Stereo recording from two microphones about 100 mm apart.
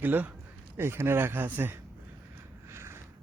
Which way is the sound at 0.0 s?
20° right (ahead or behind).